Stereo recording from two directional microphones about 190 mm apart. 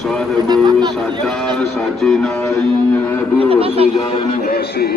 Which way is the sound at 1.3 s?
Centre (ahead or behind).